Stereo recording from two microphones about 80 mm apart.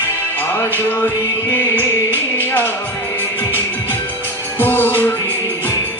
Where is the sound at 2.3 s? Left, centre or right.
Left.